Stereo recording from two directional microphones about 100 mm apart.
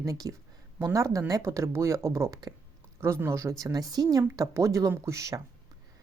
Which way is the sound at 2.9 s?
25° right (ahead or behind).